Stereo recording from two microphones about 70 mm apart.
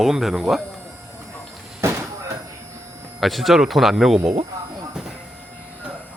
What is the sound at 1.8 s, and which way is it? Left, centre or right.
Slam, right.